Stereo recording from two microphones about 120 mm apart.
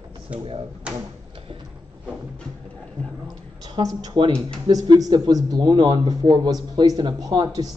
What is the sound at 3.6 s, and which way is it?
Speech, 35° right (ahead or behind).